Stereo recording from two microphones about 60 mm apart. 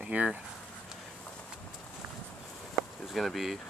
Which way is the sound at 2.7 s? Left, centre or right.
Centre.